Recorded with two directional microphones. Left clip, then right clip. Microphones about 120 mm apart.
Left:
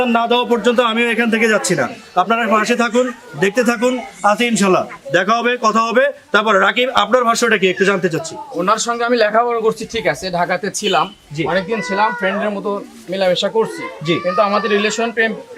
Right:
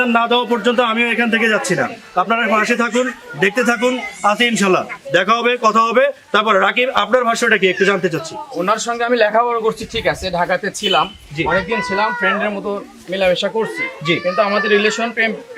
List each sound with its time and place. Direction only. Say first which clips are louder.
0.0 s speech: even; 10° left (ahead or behind)